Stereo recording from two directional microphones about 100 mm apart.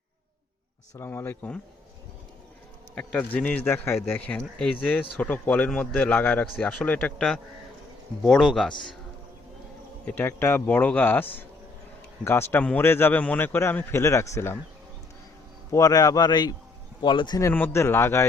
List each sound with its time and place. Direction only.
0.9 s a man's voice: 25° left (ahead or behind)
2.9 s speech: 10° left (ahead or behind)
4.4 s speech: 10° left (ahead or behind)
8.2 s speech: centre (ahead or behind)
10.1 s a man's voice: 20° left (ahead or behind)
15.7 s a man's voice: 35° left (ahead or behind)
17.5 s a man's voice: 20° left (ahead or behind)